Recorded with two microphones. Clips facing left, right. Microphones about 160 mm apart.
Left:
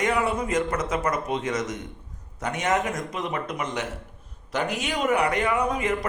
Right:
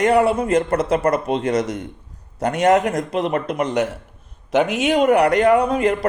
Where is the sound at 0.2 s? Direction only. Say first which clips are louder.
Right 8 dB; 60° right (ahead or behind).